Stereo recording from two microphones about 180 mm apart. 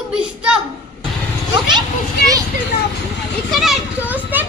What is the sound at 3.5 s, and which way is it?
Speech, centre (ahead or behind).